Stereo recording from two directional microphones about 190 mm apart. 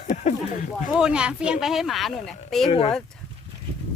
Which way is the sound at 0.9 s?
5° right (ahead or behind).